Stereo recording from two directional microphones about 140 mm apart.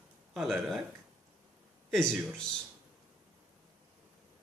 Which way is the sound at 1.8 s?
5° left (ahead or behind).